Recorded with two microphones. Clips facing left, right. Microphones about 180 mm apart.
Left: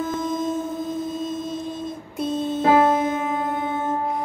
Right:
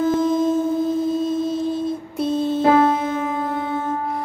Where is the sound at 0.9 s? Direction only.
Centre (ahead or behind).